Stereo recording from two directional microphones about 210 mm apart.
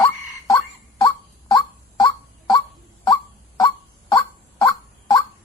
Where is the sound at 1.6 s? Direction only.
20° left (ahead or behind).